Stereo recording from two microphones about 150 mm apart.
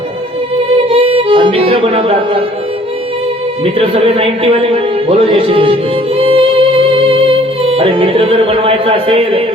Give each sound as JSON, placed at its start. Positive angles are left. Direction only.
{"t": 0.9, "sound": "music", "side_deg": -40}
{"t": 3.6, "sound": "a man's voice", "side_deg": -40}
{"t": 6.1, "sound": "music", "side_deg": -40}